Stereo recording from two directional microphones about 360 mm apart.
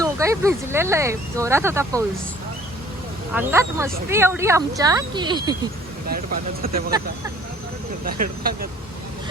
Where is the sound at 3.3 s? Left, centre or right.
Centre.